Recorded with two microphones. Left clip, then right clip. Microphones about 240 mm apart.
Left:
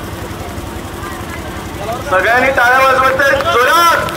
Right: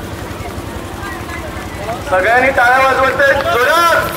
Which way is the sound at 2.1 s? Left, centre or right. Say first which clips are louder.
Even; left.